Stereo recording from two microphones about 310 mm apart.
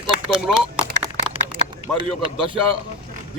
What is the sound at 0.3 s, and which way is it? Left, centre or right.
Speech, centre.